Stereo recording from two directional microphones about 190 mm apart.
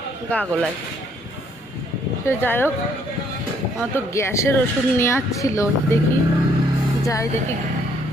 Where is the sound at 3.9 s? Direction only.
15° left (ahead or behind).